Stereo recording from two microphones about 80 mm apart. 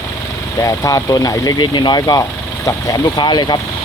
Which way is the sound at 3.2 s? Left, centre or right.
Left.